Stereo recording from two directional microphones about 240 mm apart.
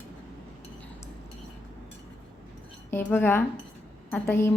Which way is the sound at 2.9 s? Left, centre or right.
Centre.